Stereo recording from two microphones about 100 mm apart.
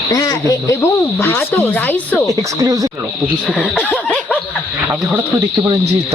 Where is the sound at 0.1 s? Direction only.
35° left (ahead or behind).